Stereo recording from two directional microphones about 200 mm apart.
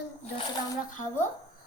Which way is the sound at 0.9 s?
40° left (ahead or behind).